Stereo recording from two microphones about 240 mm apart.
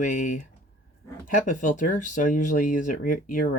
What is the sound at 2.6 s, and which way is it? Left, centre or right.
Speech, left.